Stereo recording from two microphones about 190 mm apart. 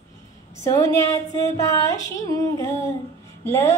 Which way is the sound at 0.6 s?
20° left (ahead or behind).